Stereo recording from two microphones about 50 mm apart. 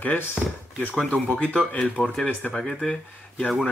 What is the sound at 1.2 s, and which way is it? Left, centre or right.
Speech, left.